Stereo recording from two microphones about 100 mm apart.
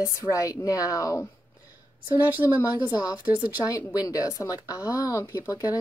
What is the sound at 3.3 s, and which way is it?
Speech, 15° right (ahead or behind).